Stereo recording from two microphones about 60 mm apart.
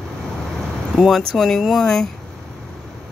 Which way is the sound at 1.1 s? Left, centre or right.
Centre.